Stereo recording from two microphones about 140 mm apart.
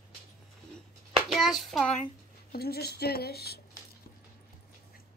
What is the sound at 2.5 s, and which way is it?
Speech, 90° left.